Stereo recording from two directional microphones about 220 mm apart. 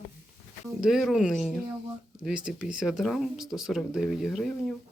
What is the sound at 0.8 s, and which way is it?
Speech, centre (ahead or behind).